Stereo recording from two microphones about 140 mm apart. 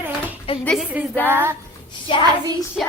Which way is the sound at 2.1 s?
35° left (ahead or behind).